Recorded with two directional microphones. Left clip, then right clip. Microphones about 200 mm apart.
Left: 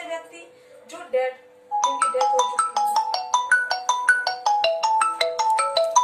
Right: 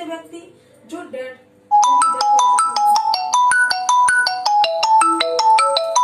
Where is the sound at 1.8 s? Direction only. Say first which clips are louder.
Right 3 dB; 50° right (ahead or behind).